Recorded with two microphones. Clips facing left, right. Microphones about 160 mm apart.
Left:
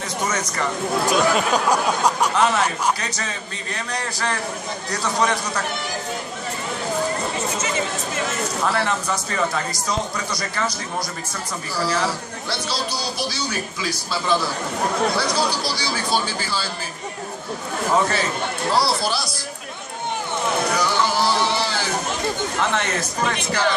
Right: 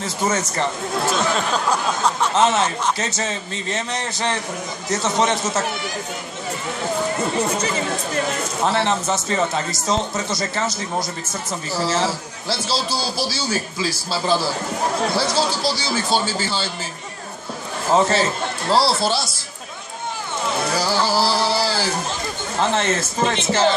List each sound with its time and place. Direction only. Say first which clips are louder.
0.3 s a man's voice: right 3 dB; 25° right (ahead or behind)
1.1 s speech: left 4 dB; 10° left (ahead or behind)
2.3 s a man's voice: right 2 dB; 25° right (ahead or behind)
8.6 s a man's voice: right 4 dB; 25° right (ahead or behind)
15.6 s a man's voice: right 3 dB; 25° right (ahead or behind)
17.9 s a man's voice: right 4 dB; 30° right (ahead or behind)
20.7 s music: right 1 dB; 30° right (ahead or behind)
22.6 s a man's voice: right 6 dB; 30° right (ahead or behind)